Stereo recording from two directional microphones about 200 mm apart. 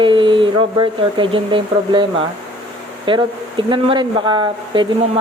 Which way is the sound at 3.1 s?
25° right (ahead or behind).